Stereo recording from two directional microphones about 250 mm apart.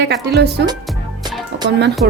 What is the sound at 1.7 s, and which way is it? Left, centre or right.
Speech, right.